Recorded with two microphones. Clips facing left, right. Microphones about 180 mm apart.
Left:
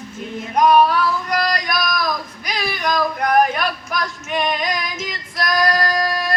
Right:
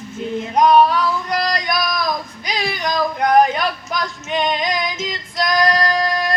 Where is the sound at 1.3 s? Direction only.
25° right (ahead or behind).